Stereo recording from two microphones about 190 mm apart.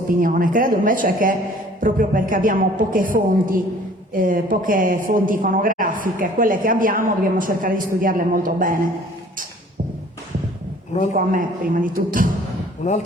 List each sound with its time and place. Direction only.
0.1 s a woman's voice: 45° right (ahead or behind)
11.1 s a woman's voice: 45° right (ahead or behind)
12.8 s speech: 40° left (ahead or behind)